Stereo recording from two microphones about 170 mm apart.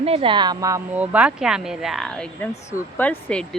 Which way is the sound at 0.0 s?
35° right (ahead or behind).